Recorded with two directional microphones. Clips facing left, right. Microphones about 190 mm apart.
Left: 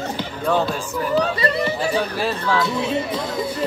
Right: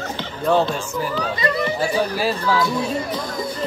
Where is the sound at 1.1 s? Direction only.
30° left (ahead or behind).